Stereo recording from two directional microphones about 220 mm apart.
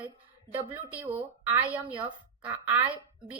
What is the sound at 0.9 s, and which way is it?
Speech, 5° right (ahead or behind).